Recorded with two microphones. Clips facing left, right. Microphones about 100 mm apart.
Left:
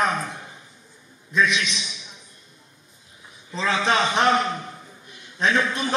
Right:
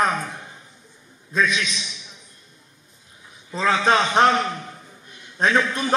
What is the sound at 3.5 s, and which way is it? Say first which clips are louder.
Speech: right 3 dB; 40° right (ahead or behind).